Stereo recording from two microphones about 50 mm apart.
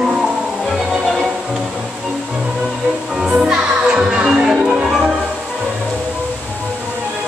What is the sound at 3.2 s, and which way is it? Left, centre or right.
Music, centre.